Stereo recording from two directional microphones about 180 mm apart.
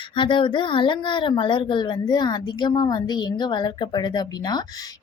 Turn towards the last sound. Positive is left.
turn(degrees=20)  # may be behind; listen again after turning